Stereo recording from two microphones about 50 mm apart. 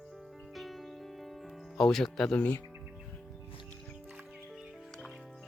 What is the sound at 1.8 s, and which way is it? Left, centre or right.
Speech, centre.